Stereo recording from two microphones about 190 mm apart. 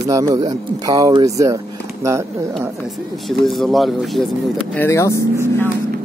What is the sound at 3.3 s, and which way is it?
Speech, centre (ahead or behind).